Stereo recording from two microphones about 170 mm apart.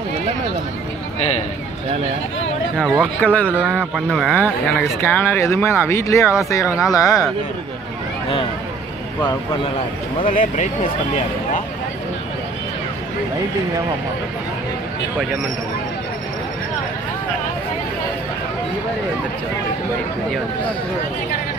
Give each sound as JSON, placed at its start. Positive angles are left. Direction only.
{"t": 3.2, "sound": "speech", "side_deg": 10}
{"t": 3.5, "sound": "speech", "side_deg": -5}
{"t": 10.2, "sound": "speech", "side_deg": 50}